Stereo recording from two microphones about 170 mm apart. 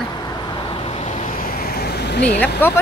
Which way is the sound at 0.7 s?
35° left (ahead or behind).